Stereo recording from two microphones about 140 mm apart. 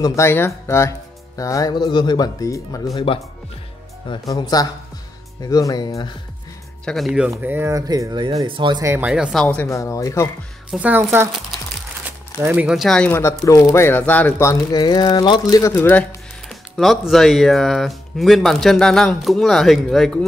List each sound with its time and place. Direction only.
0.0 s speech: 20° left (ahead or behind)
3.1 s speech: 40° left (ahead or behind)
6.8 s speech: 5° left (ahead or behind)
7.1 s speech: 5° right (ahead or behind); by 8.8 s 35° right (ahead or behind)
8.8 s speech: 15° right (ahead or behind); by 9.7 s 5° left (ahead or behind)
9.7 s speech: 20° left (ahead or behind)
10.7 s speech: 10° right (ahead or behind)
12.4 s speech: 10° right (ahead or behind)
13.5 s speech: 20° left (ahead or behind)
15.7 s speech: 15° left (ahead or behind)
16.4 s speech: centre (ahead or behind)